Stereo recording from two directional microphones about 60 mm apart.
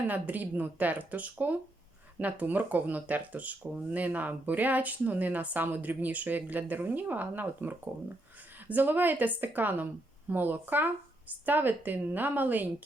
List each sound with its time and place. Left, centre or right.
0.1 s speech: right